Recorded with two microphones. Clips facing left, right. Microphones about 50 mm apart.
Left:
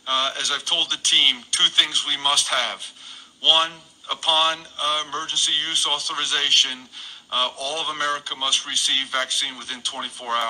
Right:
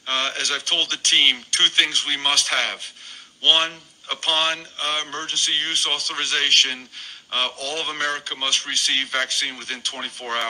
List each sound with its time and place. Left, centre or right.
0.1 s a man's voice: right
1.1 s speech: right
1.5 s a man's voice: right
10.2 s speech: centre